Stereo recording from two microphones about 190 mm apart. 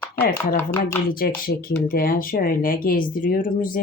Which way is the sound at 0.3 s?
10° left (ahead or behind).